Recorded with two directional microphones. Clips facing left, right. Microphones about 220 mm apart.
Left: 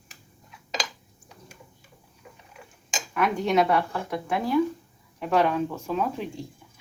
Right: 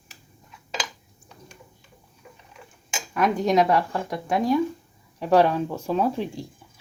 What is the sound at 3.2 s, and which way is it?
Speech, 40° right (ahead or behind).